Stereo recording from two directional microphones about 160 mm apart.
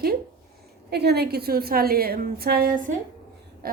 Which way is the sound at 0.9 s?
90° right.